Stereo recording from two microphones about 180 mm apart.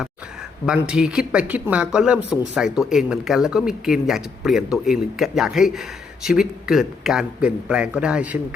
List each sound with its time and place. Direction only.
0.6 s speech: 5° right (ahead or behind)